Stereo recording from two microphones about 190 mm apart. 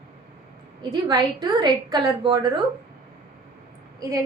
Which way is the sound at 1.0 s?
20° right (ahead or behind).